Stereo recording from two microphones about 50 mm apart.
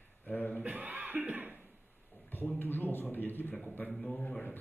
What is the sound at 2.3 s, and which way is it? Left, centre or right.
A man's voice, left.